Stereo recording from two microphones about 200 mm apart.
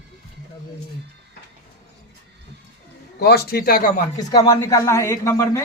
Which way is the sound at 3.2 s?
55° left (ahead or behind).